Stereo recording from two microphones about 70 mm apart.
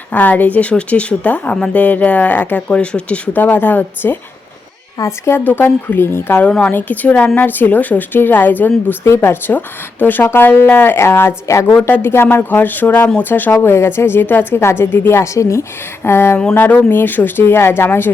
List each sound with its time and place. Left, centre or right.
0.1 s speech: left
4.9 s a woman's voice: left
5.4 s speech: left
9.0 s speech: left
9.5 s speech: left
11.7 s speech: left
16.0 s speech: left